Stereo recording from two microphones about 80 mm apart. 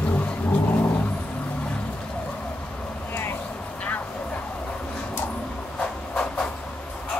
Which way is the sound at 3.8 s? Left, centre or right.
Centre.